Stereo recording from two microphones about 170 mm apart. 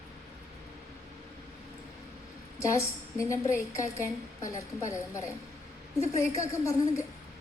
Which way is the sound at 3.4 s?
50° left (ahead or behind).